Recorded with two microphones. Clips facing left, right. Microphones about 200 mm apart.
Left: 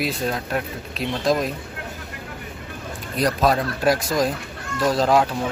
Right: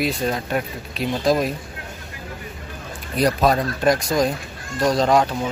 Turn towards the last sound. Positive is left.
turn(degrees=5)  # may be behind; listen again after turning